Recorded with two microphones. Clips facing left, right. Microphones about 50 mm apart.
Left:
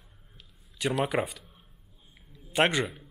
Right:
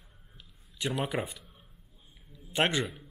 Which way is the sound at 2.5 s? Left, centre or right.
Centre.